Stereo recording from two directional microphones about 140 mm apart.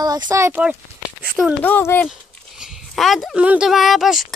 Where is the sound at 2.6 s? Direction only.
Centre (ahead or behind).